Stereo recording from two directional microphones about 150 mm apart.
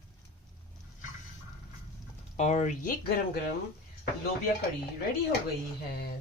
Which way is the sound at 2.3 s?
50° left (ahead or behind).